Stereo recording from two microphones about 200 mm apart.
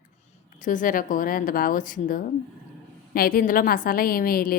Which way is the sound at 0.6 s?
40° left (ahead or behind).